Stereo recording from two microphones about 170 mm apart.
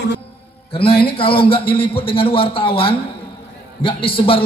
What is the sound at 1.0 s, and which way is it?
A man's voice, 30° left (ahead or behind).